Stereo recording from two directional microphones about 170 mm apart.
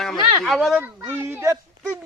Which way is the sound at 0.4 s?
Centre (ahead or behind).